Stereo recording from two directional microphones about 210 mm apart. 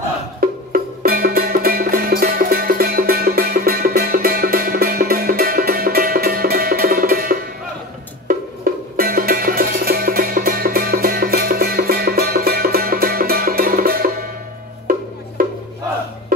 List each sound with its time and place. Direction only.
0.4 s music: 45° right (ahead or behind)
8.9 s music: 45° right (ahead or behind)